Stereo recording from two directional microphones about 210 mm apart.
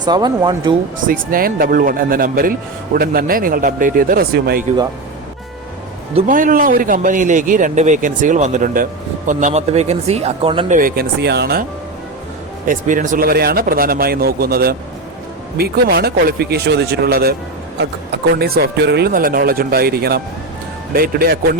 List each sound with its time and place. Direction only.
0.0 s speech: 20° right (ahead or behind)
0.9 s speech: 40° right (ahead or behind)
6.1 s a man's voice: 40° right (ahead or behind)
10.7 s speech: 40° right (ahead or behind)
12.6 s speech: 40° right (ahead or behind)